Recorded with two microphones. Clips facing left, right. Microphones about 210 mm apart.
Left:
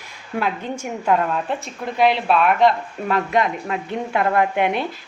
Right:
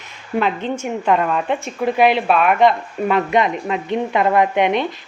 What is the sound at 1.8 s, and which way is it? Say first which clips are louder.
Speech: right 3 dB; 55° right (ahead or behind).